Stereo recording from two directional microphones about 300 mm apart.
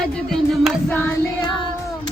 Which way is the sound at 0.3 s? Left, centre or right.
Centre.